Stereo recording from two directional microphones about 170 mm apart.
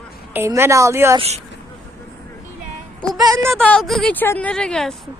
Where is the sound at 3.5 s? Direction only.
5° left (ahead or behind).